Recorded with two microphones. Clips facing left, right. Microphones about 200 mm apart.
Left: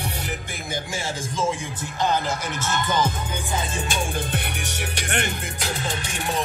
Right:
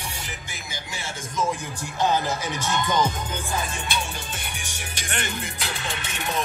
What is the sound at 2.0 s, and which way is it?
Music, 15° right (ahead or behind).